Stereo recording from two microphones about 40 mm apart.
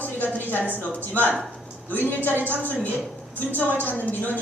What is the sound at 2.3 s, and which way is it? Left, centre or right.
Speech, right.